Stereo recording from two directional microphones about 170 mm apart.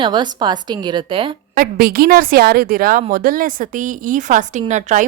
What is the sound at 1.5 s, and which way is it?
A woman's voice, 60° right (ahead or behind).